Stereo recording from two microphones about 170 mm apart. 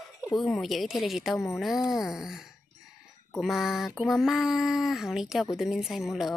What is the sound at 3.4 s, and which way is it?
Speech, centre (ahead or behind).